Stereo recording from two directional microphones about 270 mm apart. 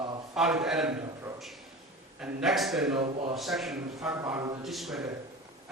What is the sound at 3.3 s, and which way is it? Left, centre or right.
A man's voice, centre.